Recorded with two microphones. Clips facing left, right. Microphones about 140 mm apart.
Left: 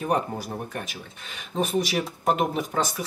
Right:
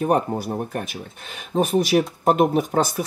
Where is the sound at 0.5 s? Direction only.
30° right (ahead or behind).